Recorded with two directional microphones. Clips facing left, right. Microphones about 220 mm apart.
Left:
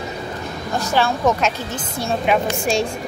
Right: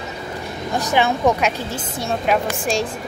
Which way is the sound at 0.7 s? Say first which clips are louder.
Right 1 dB; 15° right (ahead or behind).